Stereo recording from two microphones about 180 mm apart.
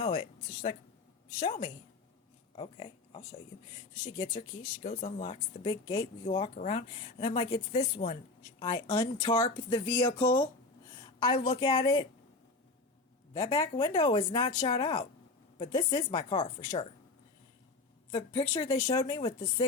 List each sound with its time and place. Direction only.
0.0 s speech: 30° left (ahead or behind)
8.5 s speech: 25° left (ahead or behind)
13.3 s speech: 20° left (ahead or behind)
18.1 s speech: 25° left (ahead or behind)